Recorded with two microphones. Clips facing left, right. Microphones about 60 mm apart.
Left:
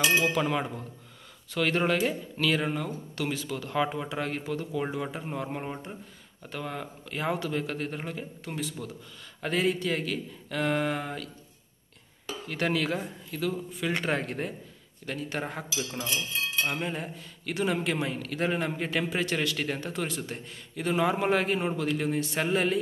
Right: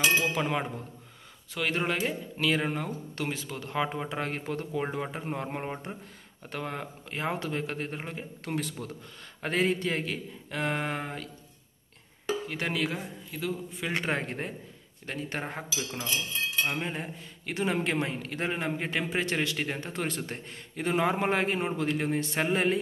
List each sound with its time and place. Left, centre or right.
0.2 s a man's voice: right
1.5 s speech: centre
2.7 s a man's voice: right
8.5 s a man's voice: right
9.4 s a man's voice: right
12.3 s a man's voice: centre
19.9 s a man's voice: right